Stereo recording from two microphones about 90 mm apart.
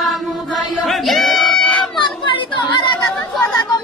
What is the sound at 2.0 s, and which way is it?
Chatter, 65° left (ahead or behind).